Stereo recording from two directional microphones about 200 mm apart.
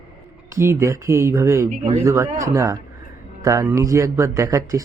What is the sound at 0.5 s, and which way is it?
Speech, 15° right (ahead or behind).